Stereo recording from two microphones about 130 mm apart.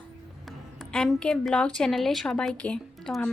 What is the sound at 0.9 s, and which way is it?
A woman's voice, 5° left (ahead or behind).